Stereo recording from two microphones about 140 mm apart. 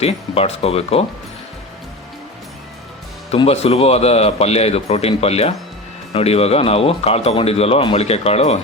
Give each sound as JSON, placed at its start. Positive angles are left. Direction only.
{"t": 0.0, "sound": "speech", "side_deg": 45}
{"t": 3.3, "sound": "speech", "side_deg": 45}